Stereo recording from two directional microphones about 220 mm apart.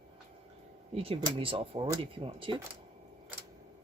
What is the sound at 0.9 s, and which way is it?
Speech, 25° right (ahead or behind).